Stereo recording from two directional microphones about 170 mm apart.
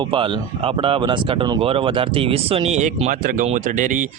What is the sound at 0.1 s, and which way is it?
Speech, 30° right (ahead or behind).